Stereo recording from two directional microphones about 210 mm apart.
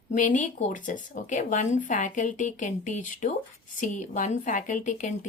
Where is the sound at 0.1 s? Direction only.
35° left (ahead or behind).